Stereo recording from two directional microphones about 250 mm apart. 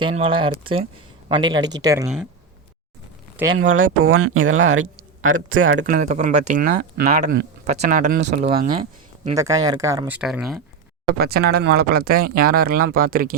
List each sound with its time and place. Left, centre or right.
0.0 s speech: right
3.7 s speech: right
5.9 s speech: right
9.3 s speech: centre
11.2 s speech: right